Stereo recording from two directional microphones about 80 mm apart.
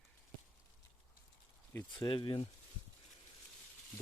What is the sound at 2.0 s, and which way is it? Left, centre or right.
Speech, left.